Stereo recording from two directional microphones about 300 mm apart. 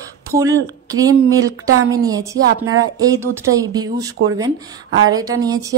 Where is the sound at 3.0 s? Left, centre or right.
Centre.